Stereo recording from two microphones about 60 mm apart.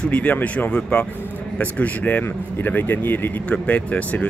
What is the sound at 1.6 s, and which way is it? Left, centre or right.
A man's voice, left.